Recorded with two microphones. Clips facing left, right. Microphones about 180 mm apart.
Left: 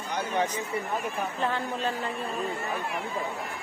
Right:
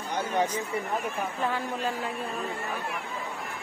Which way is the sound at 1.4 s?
10° right (ahead or behind).